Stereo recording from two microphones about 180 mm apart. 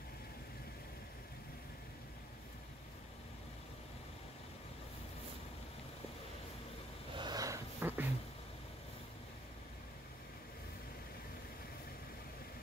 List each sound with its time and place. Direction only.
7.2 s wheeze: 20° right (ahead or behind)